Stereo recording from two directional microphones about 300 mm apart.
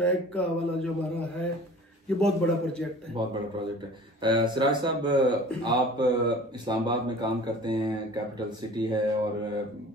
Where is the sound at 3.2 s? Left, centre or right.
Centre.